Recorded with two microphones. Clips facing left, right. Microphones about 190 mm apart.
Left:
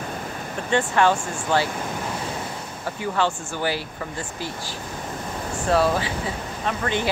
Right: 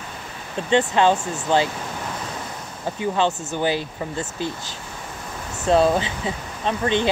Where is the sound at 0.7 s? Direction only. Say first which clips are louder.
Right 2 dB; 20° right (ahead or behind).